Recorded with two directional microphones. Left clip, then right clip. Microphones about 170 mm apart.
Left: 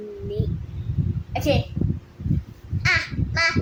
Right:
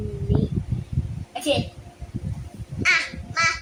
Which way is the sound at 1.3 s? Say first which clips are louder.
Left 1 dB; 25° left (ahead or behind).